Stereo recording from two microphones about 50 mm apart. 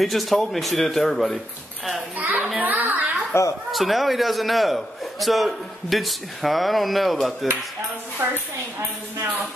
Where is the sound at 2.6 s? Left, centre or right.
Right.